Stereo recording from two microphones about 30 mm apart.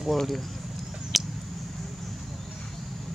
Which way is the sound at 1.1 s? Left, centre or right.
Centre.